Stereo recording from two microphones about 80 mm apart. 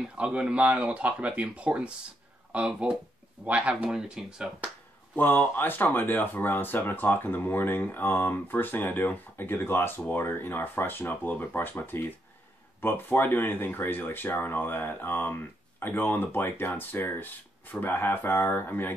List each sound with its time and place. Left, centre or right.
0.0 s speech: centre
5.1 s speech: left